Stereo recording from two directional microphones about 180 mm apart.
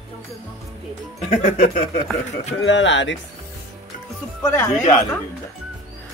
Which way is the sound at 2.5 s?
90° left.